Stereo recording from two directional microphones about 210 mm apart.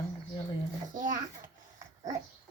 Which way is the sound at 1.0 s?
40° right (ahead or behind).